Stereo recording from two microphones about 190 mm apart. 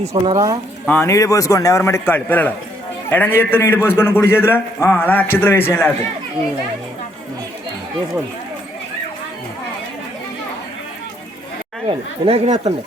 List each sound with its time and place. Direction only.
0.0 s speech: 35° right (ahead or behind)
0.3 s speech: 20° right (ahead or behind)
0.9 s a man's voice: 10° left (ahead or behind)
11.9 s speech: 30° right (ahead or behind)